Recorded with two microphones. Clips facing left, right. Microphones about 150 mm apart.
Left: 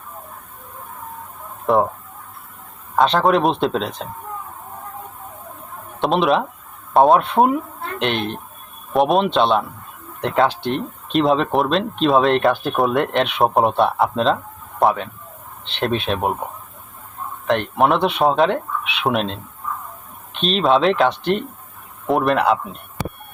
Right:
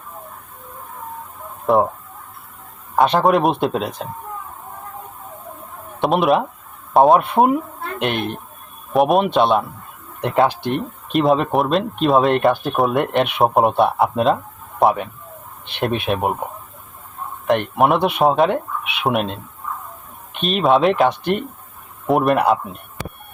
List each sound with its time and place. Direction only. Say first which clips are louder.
1.6 s speech: right 1 dB; centre (ahead or behind)
2.9 s speech: right 1 dB; 5° right (ahead or behind)
6.0 s speech: right 1 dB; centre (ahead or behind)
15.6 s speech: even; 10° right (ahead or behind)
17.4 s speech: right 1 dB; 5° right (ahead or behind)